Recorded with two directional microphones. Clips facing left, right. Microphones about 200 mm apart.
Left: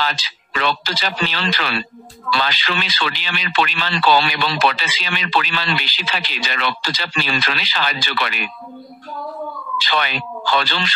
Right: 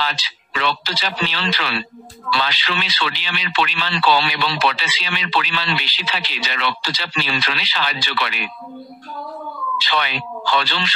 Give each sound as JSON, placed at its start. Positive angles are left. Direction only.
{"t": 0.0, "sound": "speech", "side_deg": 50}
{"t": 9.8, "sound": "speech", "side_deg": 45}